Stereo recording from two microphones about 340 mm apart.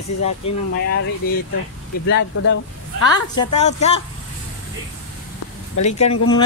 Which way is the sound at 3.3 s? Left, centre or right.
Centre.